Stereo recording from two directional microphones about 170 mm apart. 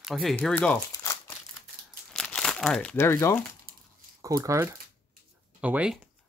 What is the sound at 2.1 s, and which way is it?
Speech, 5° left (ahead or behind).